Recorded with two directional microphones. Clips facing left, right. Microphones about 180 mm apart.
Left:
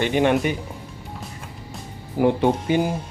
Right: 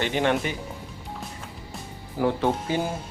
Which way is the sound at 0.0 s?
15° left (ahead or behind).